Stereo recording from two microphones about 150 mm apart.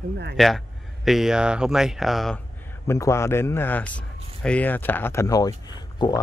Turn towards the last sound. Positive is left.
turn(degrees=25)  # may be behind; listen again after turning